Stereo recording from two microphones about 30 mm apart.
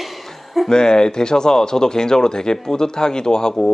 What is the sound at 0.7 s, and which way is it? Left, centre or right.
Speech, left.